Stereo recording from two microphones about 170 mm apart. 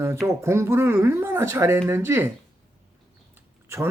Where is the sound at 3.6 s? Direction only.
15° right (ahead or behind).